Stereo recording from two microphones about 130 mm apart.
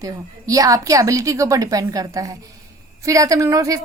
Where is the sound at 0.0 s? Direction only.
25° right (ahead or behind).